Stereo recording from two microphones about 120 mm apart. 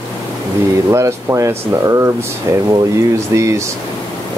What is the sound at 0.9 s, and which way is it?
Speech, 25° right (ahead or behind).